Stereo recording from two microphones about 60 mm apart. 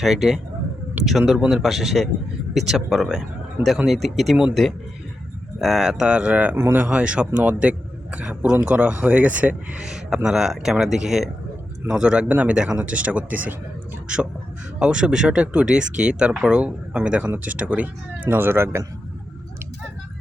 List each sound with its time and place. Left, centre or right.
0.0 s speech: centre
5.5 s speech: centre
12.3 s speech: right
14.8 s speech: centre; by 18.8 s right